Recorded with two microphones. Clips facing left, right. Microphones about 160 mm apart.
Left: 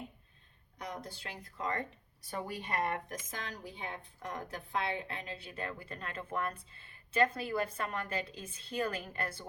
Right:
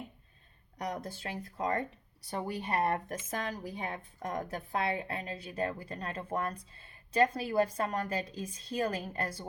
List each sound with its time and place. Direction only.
0.9 s speech: 45° right (ahead or behind)